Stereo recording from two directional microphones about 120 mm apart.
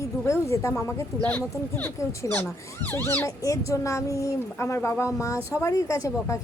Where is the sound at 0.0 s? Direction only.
25° left (ahead or behind).